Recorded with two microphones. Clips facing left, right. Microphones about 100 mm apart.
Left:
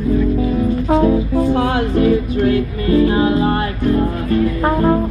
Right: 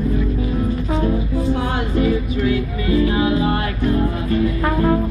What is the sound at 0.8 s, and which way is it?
Music, 70° left (ahead or behind).